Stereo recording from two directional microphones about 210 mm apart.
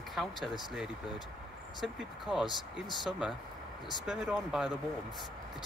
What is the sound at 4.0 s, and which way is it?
Speech, centre (ahead or behind).